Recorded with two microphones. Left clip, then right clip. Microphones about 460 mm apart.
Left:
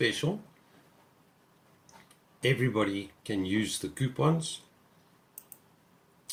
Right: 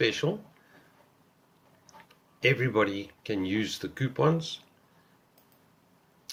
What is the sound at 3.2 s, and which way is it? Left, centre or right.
Speech, centre.